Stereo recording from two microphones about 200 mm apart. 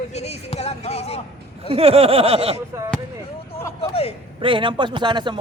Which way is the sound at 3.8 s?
30° left (ahead or behind).